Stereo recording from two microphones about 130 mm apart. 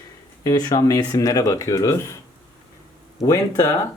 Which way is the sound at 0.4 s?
30° left (ahead or behind).